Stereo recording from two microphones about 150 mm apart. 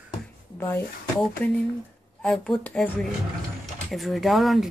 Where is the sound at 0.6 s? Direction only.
15° left (ahead or behind).